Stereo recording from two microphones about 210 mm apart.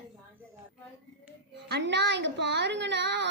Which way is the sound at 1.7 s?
55° right (ahead or behind).